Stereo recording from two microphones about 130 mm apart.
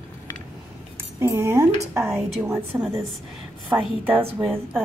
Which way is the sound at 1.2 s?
20° right (ahead or behind).